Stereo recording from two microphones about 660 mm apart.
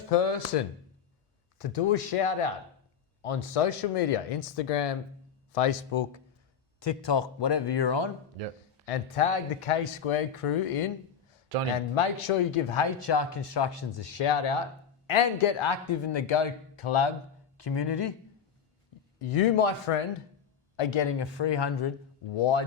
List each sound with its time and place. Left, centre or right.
0.1 s speech: left
6.7 s speech: left
8.4 s speech: right
8.9 s speech: left
11.5 s speech: right
11.9 s speech: left
17.6 s speech: left
19.2 s speech: left
22.4 s speech: left